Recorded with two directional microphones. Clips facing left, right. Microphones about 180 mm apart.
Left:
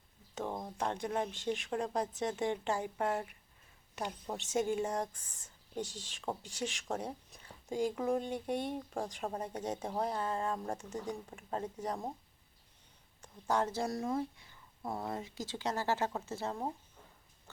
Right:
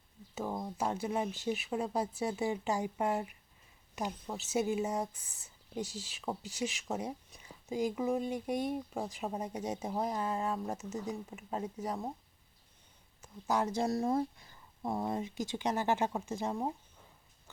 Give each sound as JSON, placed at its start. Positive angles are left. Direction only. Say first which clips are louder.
{"t": 0.3, "sound": "speech", "louder": "right 2 dB", "side_deg": -5}
{"t": 4.4, "sound": "speech", "louder": "right 1 dB", "side_deg": -5}
{"t": 13.2, "sound": "speech", "louder": "right 1 dB", "side_deg": -10}
{"t": 13.8, "sound": "speech", "louder": "right 4 dB", "side_deg": -30}
{"t": 14.8, "sound": "speech", "louder": "right 4 dB", "side_deg": -20}